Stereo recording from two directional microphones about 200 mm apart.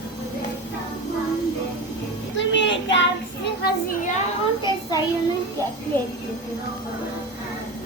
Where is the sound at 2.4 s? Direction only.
65° left (ahead or behind).